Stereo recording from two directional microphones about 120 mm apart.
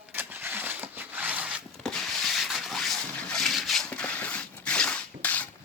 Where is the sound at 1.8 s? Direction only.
Centre (ahead or behind).